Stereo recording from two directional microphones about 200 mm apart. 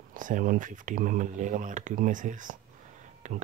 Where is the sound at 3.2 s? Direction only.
35° right (ahead or behind).